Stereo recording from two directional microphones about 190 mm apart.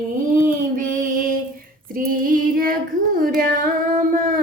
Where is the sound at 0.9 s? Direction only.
45° right (ahead or behind).